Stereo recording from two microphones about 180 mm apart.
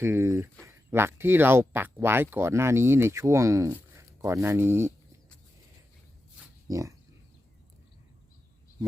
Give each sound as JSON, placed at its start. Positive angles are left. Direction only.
{"t": 0.0, "sound": "speech", "side_deg": -15}
{"t": 6.7, "sound": "speech", "side_deg": -20}